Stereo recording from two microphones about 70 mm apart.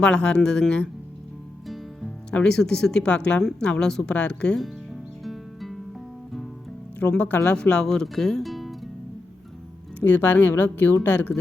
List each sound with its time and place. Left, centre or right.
0.0 s speech: centre
1.6 s music: centre
2.3 s speech: centre
5.2 s music: centre
7.0 s a woman's voice: centre
10.0 s a woman's voice: left